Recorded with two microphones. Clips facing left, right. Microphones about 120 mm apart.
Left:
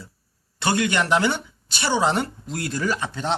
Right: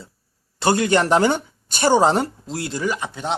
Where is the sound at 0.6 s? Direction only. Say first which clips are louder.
Right 4 dB; 40° right (ahead or behind).